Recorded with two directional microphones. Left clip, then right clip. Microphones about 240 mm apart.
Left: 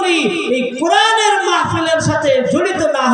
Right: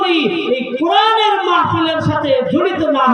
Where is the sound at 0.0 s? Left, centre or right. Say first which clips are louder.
Even; right.